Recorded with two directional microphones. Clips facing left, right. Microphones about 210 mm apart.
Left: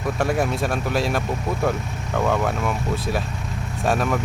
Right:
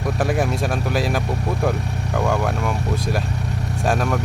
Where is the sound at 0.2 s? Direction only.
Centre (ahead or behind).